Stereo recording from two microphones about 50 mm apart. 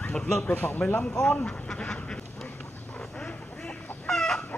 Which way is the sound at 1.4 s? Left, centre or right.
Centre.